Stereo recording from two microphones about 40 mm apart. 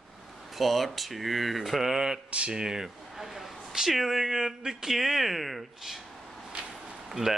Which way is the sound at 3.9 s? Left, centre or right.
Centre.